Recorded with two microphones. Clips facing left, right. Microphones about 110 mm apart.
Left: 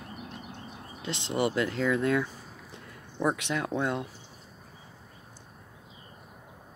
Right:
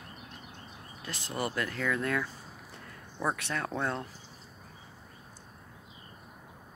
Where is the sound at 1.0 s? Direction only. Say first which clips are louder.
Left 6 dB; 20° left (ahead or behind).